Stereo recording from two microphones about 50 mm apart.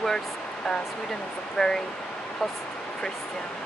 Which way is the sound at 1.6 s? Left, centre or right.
Centre.